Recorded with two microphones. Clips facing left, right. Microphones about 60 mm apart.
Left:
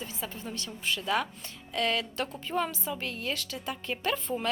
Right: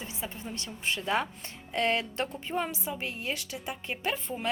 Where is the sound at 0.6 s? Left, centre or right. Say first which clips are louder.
Right 1 dB; right.